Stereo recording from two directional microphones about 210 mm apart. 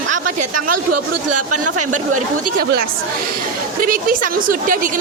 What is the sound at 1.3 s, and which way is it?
Speech, 90° right.